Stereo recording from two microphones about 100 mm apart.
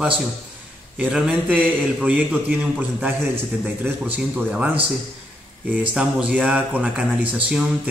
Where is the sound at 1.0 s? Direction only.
15° right (ahead or behind).